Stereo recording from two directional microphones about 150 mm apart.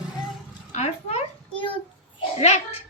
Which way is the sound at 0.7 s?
50° left (ahead or behind).